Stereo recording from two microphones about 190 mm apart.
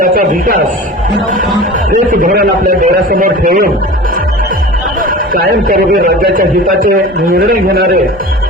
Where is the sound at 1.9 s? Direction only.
45° right (ahead or behind).